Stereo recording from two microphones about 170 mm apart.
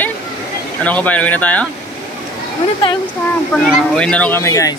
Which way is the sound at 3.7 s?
5° left (ahead or behind).